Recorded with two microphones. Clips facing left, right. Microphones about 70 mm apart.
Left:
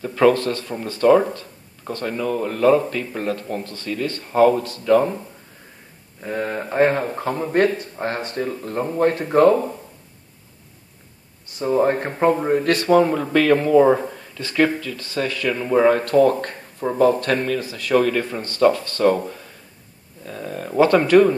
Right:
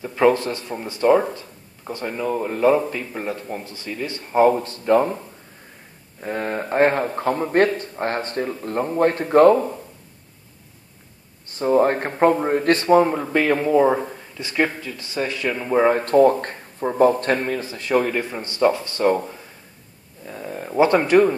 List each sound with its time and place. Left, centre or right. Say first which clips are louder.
0.0 s speech: left 1 dB; centre
4.6 s speech: left 1 dB; right
6.2 s speech: even; right
11.5 s speech: right 1 dB; right
20.2 s speech: left 1 dB; centre